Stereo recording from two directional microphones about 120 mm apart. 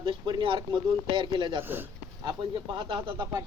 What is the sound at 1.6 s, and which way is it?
Speech, 20° right (ahead or behind).